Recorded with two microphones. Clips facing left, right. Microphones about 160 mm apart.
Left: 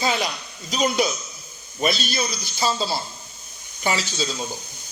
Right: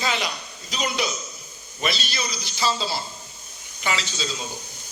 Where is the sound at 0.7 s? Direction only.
45° left (ahead or behind).